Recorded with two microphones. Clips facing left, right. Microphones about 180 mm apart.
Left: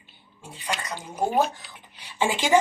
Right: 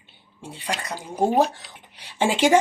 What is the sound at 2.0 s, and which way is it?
Speech, 75° right (ahead or behind).